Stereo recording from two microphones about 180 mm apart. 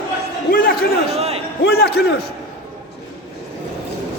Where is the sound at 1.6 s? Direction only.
65° left (ahead or behind).